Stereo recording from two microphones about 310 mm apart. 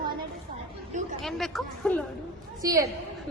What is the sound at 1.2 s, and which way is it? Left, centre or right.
Speech, centre.